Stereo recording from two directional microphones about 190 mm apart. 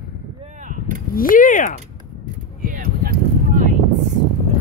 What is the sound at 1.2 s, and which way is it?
Speech, 45° left (ahead or behind).